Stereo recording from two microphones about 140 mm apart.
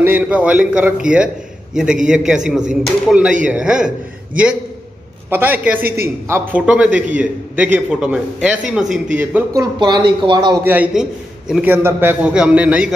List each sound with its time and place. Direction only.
0.0 s a man's voice: 10° right (ahead or behind)
5.3 s a man's voice: 15° right (ahead or behind)
9.5 s speech: 30° right (ahead or behind)
10.6 s a man's voice: 10° right (ahead or behind)